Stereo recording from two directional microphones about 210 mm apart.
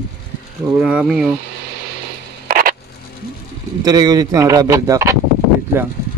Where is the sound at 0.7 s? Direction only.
5° right (ahead or behind).